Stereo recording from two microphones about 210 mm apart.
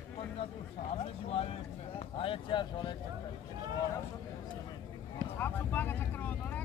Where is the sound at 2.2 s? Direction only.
25° left (ahead or behind).